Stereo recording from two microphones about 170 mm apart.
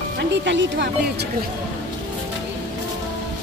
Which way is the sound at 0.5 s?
90° right.